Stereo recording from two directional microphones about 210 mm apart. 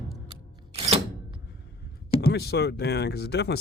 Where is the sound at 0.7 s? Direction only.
25° right (ahead or behind).